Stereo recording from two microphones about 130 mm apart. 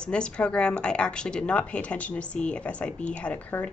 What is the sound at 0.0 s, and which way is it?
Speech, 5° left (ahead or behind).